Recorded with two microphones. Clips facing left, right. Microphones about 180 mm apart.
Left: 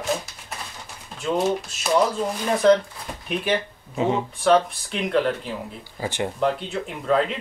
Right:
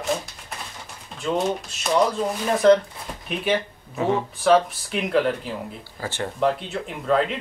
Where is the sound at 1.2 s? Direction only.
Centre (ahead or behind).